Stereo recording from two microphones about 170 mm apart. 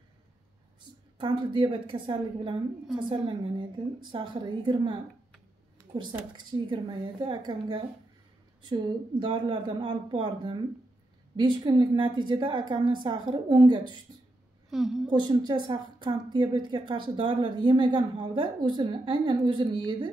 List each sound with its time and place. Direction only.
1.1 s a woman's voice: 25° right (ahead or behind)
6.5 s a woman's voice: 25° right (ahead or behind)
14.7 s a woman's voice: centre (ahead or behind)
15.0 s a woman's voice: 25° right (ahead or behind)